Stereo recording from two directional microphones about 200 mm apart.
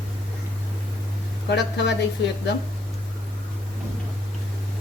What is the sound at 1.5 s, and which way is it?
Speech, 60° left (ahead or behind).